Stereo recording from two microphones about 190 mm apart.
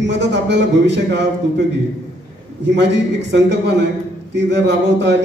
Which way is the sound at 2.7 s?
65° right (ahead or behind).